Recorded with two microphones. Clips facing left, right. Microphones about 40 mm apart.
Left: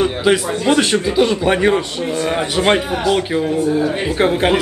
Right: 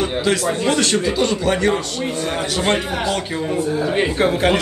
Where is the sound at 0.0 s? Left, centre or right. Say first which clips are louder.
Left 3 dB; centre.